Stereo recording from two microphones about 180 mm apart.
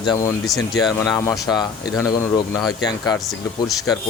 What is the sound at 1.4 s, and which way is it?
Speech, 20° left (ahead or behind).